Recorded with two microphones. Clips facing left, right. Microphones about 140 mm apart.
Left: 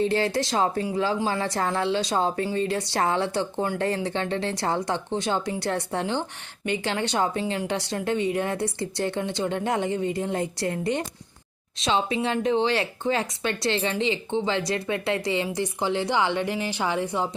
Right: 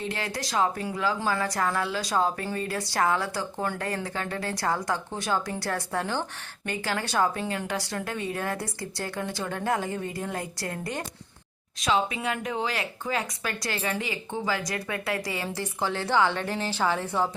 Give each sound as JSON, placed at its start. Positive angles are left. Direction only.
{"t": 0.0, "sound": "speech", "side_deg": 30}